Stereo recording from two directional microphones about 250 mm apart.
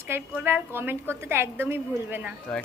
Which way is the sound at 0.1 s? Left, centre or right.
Centre.